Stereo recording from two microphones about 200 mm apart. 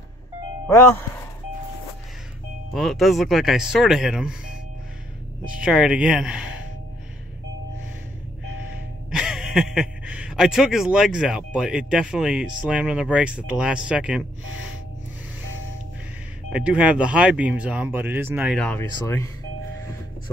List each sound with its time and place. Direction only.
2.7 s speech: centre (ahead or behind)
5.6 s speech: 5° right (ahead or behind)
9.1 s speech: 5° right (ahead or behind)
16.5 s speech: 5° right (ahead or behind)
18.9 s speech: 15° left (ahead or behind)